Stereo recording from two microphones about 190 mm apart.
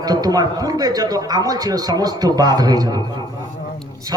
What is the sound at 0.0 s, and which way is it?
A man's voice, 20° right (ahead or behind).